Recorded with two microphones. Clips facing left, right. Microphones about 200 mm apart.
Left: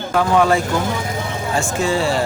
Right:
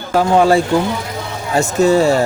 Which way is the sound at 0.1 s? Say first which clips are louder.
Right 4 dB; 30° right (ahead or behind).